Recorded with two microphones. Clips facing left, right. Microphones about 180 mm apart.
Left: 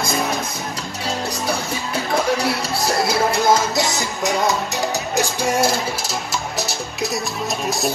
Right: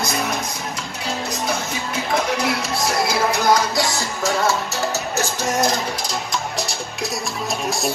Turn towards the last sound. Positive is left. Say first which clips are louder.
# left 1 dB
turn(degrees=0)  # may be behind; listen again after turning